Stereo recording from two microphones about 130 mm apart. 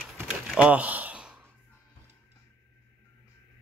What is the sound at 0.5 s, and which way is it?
Sigh, 10° right (ahead or behind).